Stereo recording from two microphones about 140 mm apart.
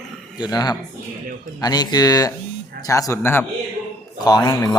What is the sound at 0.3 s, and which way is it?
Speech, 30° left (ahead or behind).